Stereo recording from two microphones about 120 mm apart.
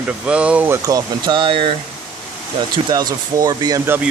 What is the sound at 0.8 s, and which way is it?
Speech, 30° right (ahead or behind).